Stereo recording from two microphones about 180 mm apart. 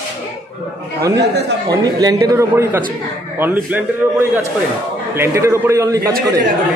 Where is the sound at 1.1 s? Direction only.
70° right (ahead or behind).